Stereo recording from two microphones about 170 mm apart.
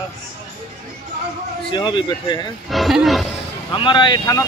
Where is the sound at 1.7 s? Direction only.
30° left (ahead or behind).